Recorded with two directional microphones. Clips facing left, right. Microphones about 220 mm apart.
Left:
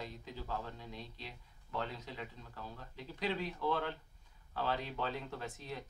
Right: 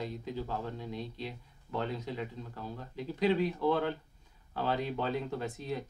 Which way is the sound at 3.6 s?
15° right (ahead or behind).